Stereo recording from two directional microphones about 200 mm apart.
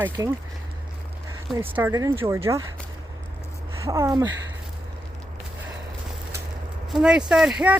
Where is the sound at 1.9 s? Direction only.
20° right (ahead or behind).